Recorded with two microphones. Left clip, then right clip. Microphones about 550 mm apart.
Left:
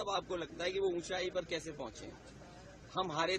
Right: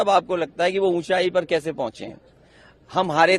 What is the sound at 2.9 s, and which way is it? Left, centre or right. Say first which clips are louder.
Speech: right 18 dB; right.